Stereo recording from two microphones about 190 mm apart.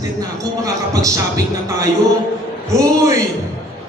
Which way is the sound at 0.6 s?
20° right (ahead or behind).